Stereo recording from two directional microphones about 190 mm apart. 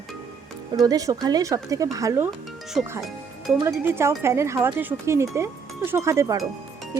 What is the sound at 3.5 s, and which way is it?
Speech, 5° right (ahead or behind).